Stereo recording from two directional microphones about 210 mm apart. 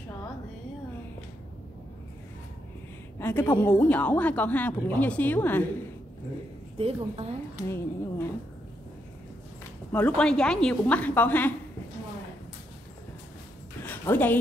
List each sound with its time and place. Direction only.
3.2 s speech: 10° left (ahead or behind)
6.8 s a woman's voice: 30° right (ahead or behind)
7.6 s speech: 10° left (ahead or behind)
9.9 s speech: 5° left (ahead or behind)
13.8 s a woman's voice: 10° left (ahead or behind)